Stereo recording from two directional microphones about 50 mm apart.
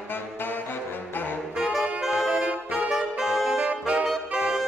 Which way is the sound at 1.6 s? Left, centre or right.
Centre.